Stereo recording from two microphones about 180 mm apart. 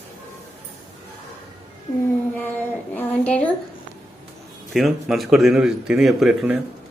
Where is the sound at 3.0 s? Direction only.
10° left (ahead or behind).